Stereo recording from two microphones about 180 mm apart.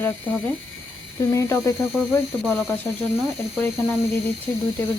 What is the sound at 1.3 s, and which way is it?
Speech, 15° left (ahead or behind).